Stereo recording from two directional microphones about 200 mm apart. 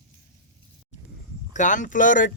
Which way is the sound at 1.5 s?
40° left (ahead or behind).